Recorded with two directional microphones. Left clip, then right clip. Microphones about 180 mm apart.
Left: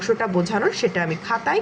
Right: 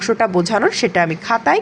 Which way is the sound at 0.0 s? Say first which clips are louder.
Right 5 dB; 40° right (ahead or behind).